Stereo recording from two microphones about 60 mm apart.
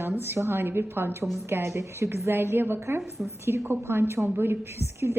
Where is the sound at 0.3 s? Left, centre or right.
Right.